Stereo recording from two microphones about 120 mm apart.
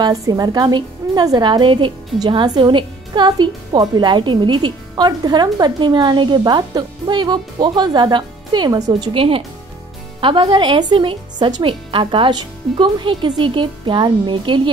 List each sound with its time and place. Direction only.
0.0 s a woman's voice: 30° right (ahead or behind)
9.1 s a woman's voice: 50° right (ahead or behind)